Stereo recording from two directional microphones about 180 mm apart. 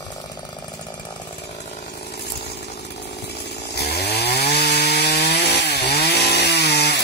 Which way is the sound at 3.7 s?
65° left (ahead or behind).